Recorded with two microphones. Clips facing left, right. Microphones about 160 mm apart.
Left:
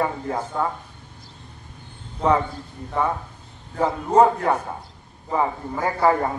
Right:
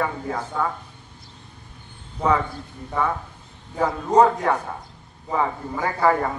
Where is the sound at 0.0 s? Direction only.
25° left (ahead or behind).